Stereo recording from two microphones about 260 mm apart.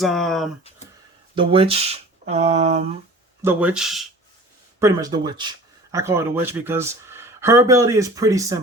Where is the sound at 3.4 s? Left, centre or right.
Centre.